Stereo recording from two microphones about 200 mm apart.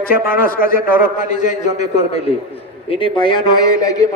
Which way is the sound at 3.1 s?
25° left (ahead or behind).